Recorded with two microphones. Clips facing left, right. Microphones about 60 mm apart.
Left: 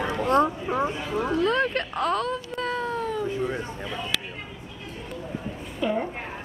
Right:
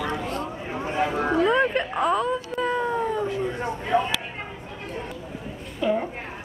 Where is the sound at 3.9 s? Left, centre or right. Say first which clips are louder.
Right 10 dB; right.